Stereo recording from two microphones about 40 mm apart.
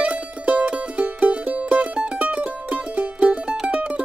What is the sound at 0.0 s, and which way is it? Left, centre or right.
Music, right.